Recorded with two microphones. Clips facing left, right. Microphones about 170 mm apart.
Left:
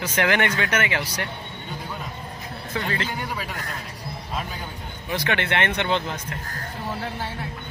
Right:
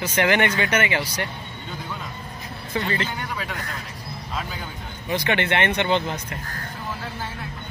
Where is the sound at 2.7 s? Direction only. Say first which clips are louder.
Right 2 dB; centre (ahead or behind).